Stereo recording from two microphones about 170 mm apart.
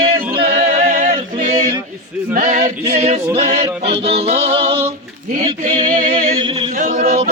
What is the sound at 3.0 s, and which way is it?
Music, 40° right (ahead or behind).